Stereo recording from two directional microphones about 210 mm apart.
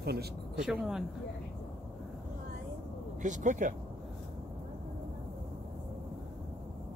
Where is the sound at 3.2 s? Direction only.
35° right (ahead or behind).